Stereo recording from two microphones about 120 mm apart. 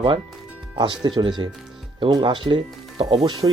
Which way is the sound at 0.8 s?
40° right (ahead or behind).